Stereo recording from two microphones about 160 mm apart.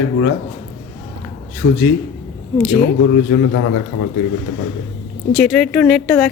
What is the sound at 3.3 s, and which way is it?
Speech, 90° left.